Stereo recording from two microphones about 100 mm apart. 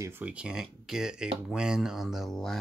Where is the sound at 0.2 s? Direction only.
10° right (ahead or behind).